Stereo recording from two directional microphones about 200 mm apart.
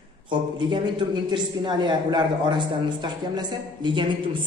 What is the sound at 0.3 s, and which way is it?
A woman's voice, 25° right (ahead or behind).